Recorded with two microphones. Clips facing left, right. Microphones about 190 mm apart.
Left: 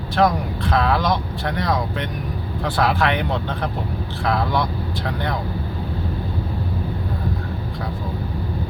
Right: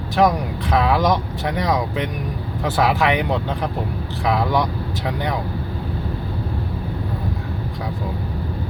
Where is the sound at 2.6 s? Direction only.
5° right (ahead or behind).